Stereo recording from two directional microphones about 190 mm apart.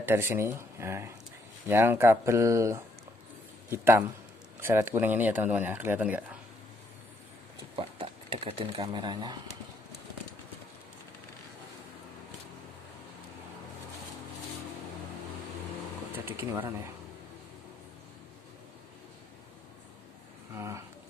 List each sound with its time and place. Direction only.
0.0 s speech: 15° right (ahead or behind)
7.7 s speech: 30° right (ahead or behind)
16.3 s speech: 10° right (ahead or behind)
20.5 s speech: 15° right (ahead or behind)